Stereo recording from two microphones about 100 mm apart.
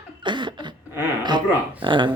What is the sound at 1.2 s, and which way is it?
Speech, 50° right (ahead or behind).